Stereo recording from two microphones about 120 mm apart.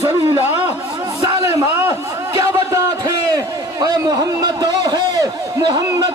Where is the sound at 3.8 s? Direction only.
35° right (ahead or behind).